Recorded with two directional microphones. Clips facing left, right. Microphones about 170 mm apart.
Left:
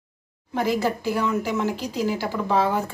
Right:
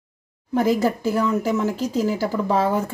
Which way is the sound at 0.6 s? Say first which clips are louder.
Right 4 dB; 40° right (ahead or behind).